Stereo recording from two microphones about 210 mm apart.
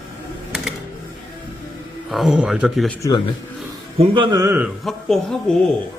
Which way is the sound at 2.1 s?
Centre (ahead or behind).